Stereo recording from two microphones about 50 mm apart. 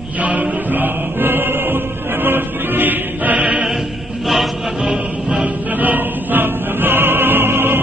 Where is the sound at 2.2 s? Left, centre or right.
Right.